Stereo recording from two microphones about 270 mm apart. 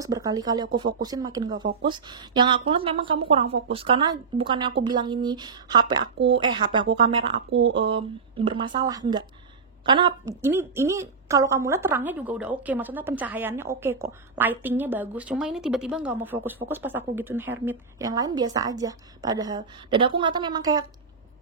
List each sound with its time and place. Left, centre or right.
0.0 s a woman's voice: centre